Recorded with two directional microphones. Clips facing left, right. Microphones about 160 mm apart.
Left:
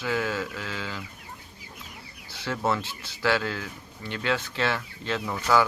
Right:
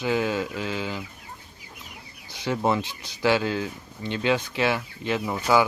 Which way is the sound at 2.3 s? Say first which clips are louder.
Right 3 dB; 15° right (ahead or behind).